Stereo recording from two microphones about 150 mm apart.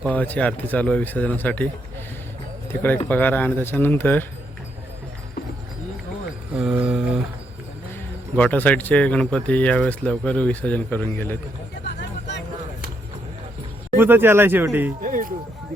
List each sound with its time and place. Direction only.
0.0 s speech: 10° left (ahead or behind)
3.1 s speech: 10° left (ahead or behind)
6.5 s mantra: 5° right (ahead or behind)
8.4 s speech: 10° left (ahead or behind)
13.9 s speech: 15° right (ahead or behind)
15.0 s a sound: 65° right (ahead or behind)